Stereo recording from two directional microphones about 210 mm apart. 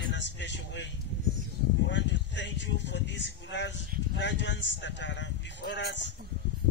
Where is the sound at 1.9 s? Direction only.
60° left (ahead or behind).